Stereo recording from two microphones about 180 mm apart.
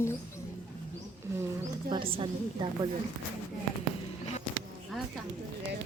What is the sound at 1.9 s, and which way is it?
A woman's voice, 30° right (ahead or behind).